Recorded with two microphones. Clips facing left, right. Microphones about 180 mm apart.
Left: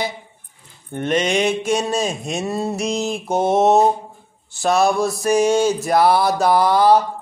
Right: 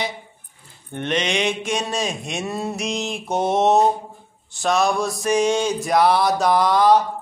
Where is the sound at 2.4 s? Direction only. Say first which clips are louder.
Left 3 dB; 30° left (ahead or behind).